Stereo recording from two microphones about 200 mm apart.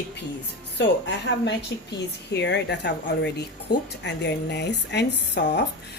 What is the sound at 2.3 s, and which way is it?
Speech, 60° left (ahead or behind).